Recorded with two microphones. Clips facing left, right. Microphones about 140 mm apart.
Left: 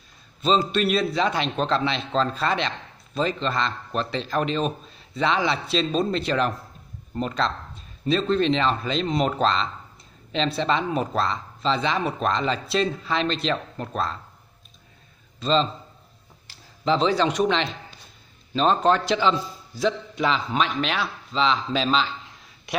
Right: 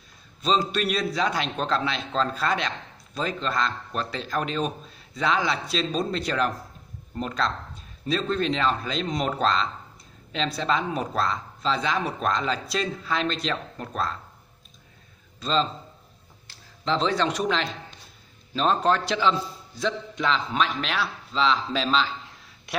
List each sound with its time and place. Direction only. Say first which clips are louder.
0.4 s speech: left 3 dB; centre (ahead or behind)
15.4 s speech: left 3 dB; centre (ahead or behind)